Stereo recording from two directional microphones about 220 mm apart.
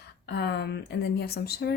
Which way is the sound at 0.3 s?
50° left (ahead or behind).